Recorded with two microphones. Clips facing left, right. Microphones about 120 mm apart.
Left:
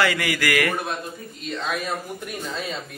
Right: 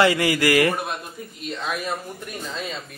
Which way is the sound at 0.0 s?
25° right (ahead or behind).